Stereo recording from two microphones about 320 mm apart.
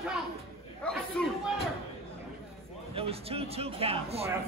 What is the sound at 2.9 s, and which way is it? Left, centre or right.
Speech, centre.